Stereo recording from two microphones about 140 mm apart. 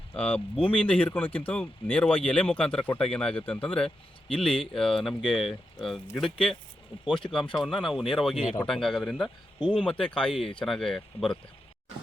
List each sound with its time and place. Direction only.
0.1 s speech: 10° left (ahead or behind)
6.9 s speech: 40° left (ahead or behind)
7.5 s speech: centre (ahead or behind)